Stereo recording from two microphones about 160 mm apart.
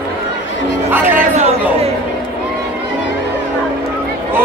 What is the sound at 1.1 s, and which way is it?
Chatter, 50° right (ahead or behind).